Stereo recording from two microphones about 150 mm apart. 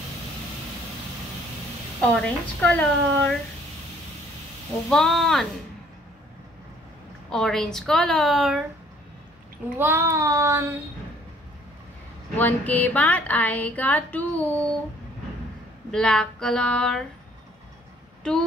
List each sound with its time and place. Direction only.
2.0 s a sound: 5° left (ahead or behind)
4.8 s a woman's voice: 5° left (ahead or behind)
7.2 s a woman's voice: 5° left (ahead or behind)
9.8 s child singing: 15° right (ahead or behind)
12.4 s a sound: 10° left (ahead or behind)
15.9 s a woman's voice: 5° left (ahead or behind)